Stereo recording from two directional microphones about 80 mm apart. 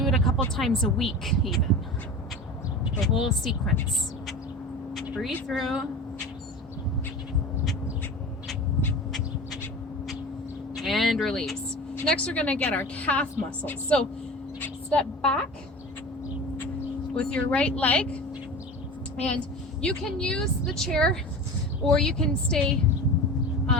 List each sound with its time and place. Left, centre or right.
0.0 s speech: centre
3.0 s speech: centre
5.5 s speech: centre
10.8 s speech: centre
12.0 s a woman's voice: centre
17.2 s speech: centre
19.1 s a woman's voice: centre